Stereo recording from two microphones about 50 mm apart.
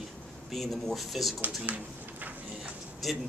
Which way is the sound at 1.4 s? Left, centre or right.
Right.